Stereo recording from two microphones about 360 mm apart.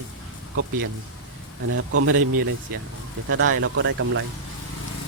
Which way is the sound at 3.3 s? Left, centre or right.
Right.